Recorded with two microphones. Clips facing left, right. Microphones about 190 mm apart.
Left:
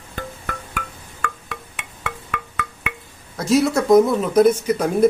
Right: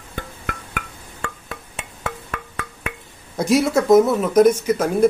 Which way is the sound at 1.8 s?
35° right (ahead or behind).